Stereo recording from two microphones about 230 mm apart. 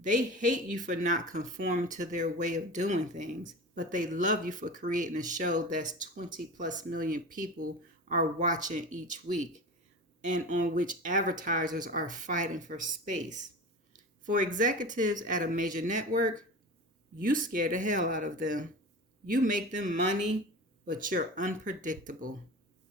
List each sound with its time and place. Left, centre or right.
0.0 s speech: right